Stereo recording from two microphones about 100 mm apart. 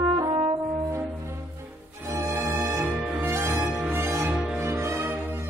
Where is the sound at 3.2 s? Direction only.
25° right (ahead or behind).